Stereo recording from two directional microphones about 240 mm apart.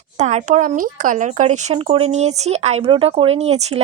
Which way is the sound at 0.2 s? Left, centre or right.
Right.